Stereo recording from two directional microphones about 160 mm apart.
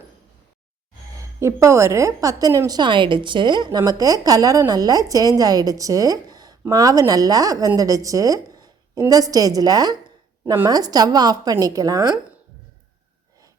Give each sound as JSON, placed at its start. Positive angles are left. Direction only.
{"t": 1.2, "sound": "a woman's voice", "side_deg": -15}